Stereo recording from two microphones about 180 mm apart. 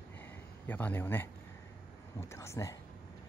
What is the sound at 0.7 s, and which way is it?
Speech, 10° left (ahead or behind).